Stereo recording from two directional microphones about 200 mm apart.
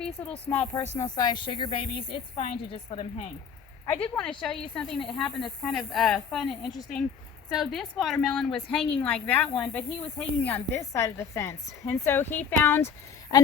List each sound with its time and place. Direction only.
0.0 s speech: 5° left (ahead or behind)
0.9 s a woman's voice: 20° left (ahead or behind)
4.0 s speech: 5° left (ahead or behind)